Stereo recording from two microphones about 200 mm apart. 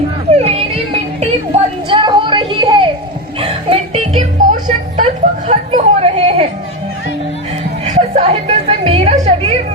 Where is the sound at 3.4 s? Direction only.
30° right (ahead or behind).